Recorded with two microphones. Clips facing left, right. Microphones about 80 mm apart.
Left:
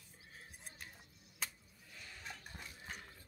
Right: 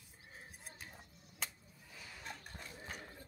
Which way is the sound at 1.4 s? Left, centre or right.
Centre.